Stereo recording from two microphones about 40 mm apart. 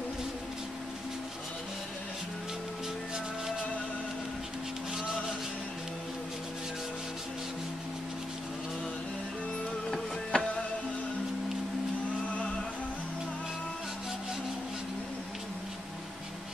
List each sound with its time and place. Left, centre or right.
10.3 s music: left